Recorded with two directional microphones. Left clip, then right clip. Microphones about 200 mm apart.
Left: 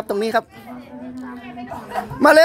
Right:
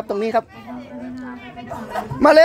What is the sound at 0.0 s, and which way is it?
Speech, 15° left (ahead or behind).